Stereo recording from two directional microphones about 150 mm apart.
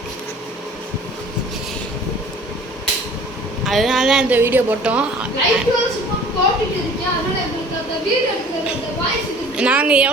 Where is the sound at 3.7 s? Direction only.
Centre (ahead or behind).